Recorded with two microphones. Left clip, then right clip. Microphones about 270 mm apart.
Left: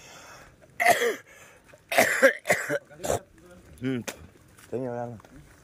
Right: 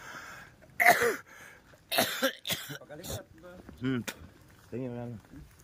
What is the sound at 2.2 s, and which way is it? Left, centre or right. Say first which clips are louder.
Cough: left 11 dB; centre.